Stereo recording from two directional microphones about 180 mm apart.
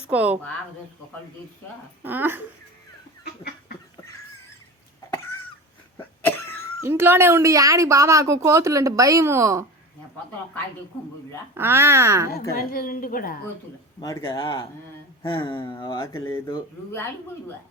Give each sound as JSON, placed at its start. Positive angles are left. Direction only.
{"t": 0.1, "sound": "a woman's voice", "side_deg": -5}
{"t": 2.0, "sound": "a woman's voice", "side_deg": -10}
{"t": 3.2, "sound": "chicken", "side_deg": 60}
{"t": 6.0, "sound": "cough", "side_deg": 10}
{"t": 6.8, "sound": "a woman's voice", "side_deg": -15}
{"t": 11.5, "sound": "a woman's voice", "side_deg": -15}
{"t": 12.3, "sound": "a woman's voice", "side_deg": 55}
{"t": 14.0, "sound": "speech", "side_deg": 25}
{"t": 16.1, "sound": "speech", "side_deg": 15}